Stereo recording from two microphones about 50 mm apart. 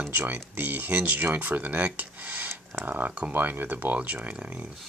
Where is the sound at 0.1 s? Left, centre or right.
Right.